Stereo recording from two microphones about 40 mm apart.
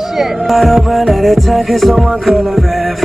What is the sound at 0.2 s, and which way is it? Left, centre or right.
Music, centre.